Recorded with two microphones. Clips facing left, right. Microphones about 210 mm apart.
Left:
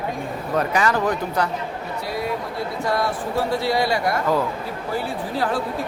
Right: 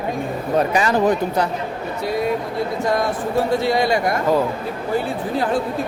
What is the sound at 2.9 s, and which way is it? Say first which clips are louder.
Speech: right 1 dB; 20° right (ahead or behind).